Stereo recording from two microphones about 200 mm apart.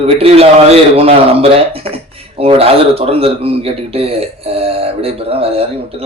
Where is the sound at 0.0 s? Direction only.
30° right (ahead or behind).